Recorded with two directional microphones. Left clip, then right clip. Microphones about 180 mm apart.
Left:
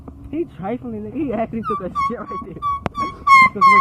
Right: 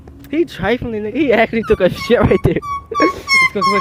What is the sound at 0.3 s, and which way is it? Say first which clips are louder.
Speech: right 9 dB; 15° right (ahead or behind).